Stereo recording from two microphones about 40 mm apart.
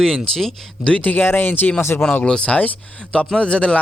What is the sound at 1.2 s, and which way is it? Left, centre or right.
Speech, left.